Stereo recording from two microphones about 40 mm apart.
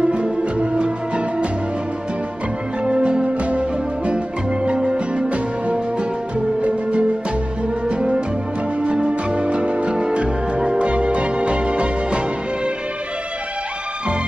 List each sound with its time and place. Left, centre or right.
0.1 s music: right
2.8 s music: right